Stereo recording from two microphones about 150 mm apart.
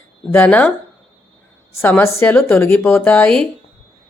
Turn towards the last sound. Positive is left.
turn(degrees=5)  # may be behind; listen again after turning